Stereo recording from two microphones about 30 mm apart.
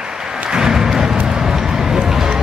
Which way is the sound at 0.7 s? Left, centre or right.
Centre.